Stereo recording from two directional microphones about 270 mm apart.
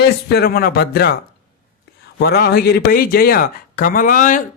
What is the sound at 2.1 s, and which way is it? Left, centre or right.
Speech, left.